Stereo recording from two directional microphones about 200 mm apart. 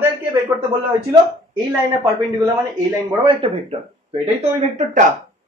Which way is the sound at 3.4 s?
30° right (ahead or behind).